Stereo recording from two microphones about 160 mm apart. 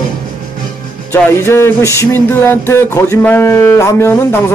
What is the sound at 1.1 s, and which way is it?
Music, 10° left (ahead or behind).